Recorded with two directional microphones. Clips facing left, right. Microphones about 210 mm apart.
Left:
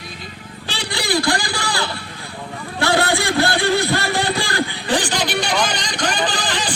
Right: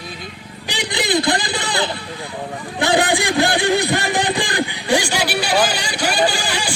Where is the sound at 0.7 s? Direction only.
15° right (ahead or behind).